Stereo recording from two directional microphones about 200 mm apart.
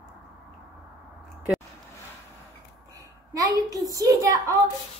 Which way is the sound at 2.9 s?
15° right (ahead or behind).